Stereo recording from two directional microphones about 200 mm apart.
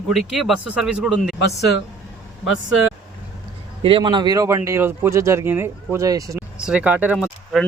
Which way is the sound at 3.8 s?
25° right (ahead or behind).